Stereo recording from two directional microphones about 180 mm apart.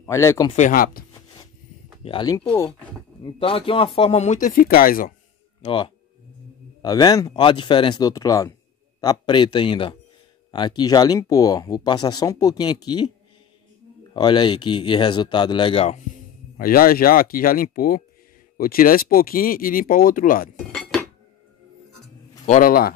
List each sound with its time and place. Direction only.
0.0 s speech: 15° left (ahead or behind)
0.5 s speech: 45° left (ahead or behind)
2.0 s speech: 25° left (ahead or behind)
3.2 s speech: 30° left (ahead or behind); by 5.1 s 50° left (ahead or behind)
5.6 s speech: 30° left (ahead or behind)
14.1 s speech: 25° left (ahead or behind)
16.5 s speech: 55° left (ahead or behind)
22.5 s speech: 50° left (ahead or behind)